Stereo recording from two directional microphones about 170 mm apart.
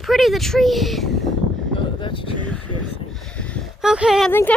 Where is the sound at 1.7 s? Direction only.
30° left (ahead or behind).